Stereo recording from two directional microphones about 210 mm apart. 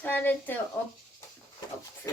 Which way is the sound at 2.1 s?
15° left (ahead or behind).